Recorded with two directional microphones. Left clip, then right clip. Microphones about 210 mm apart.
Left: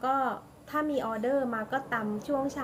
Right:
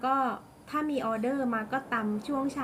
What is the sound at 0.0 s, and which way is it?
A woman's voice, 15° right (ahead or behind).